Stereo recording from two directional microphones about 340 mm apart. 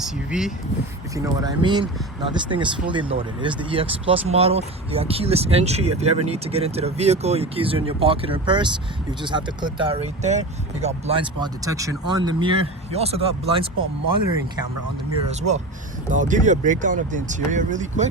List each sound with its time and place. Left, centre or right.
0.0 s speech: centre
15.4 s speech: centre